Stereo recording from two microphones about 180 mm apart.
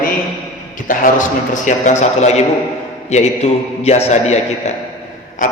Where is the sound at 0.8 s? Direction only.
45° left (ahead or behind).